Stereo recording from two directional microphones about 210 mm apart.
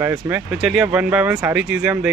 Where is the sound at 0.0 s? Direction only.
10° right (ahead or behind).